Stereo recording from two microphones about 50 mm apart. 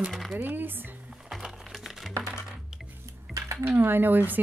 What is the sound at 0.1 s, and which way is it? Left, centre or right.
Speech, centre.